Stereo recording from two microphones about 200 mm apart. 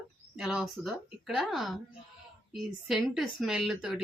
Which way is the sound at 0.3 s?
Centre (ahead or behind).